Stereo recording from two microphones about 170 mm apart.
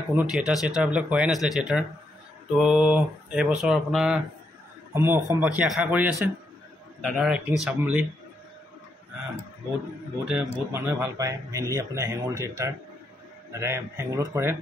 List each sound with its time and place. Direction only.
0.1 s speech: 5° right (ahead or behind)
4.9 s a man's voice: 15° right (ahead or behind)
10.2 s speech: 5° right (ahead or behind)